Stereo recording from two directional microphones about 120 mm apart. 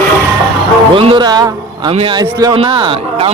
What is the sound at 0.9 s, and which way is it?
Speech, 45° right (ahead or behind).